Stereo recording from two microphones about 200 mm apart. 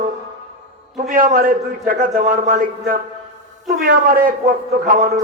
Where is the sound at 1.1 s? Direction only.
45° right (ahead or behind).